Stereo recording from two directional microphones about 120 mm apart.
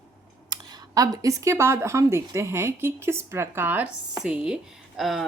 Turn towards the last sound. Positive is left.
turn(degrees=0)  # may be behind; listen again after turning